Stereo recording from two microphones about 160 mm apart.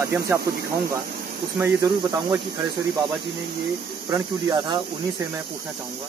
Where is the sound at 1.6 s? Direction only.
25° right (ahead or behind).